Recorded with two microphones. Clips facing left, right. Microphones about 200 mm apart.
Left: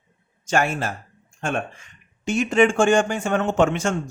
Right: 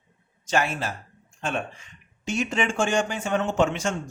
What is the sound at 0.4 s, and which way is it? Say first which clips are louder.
A man's voice: left 3 dB; 50° left (ahead or behind).